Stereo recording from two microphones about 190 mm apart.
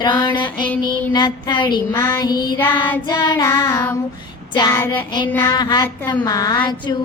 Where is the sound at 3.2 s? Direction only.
15° left (ahead or behind).